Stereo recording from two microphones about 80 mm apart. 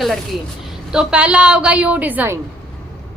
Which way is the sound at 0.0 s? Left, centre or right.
Centre.